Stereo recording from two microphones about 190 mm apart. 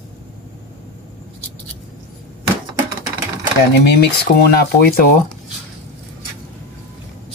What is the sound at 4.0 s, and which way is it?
Speech, 55° left (ahead or behind).